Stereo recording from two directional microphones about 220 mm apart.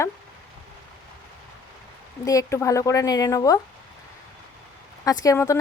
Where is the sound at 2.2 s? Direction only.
15° left (ahead or behind).